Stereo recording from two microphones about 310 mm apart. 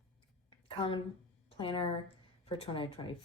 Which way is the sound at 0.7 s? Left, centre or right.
Centre.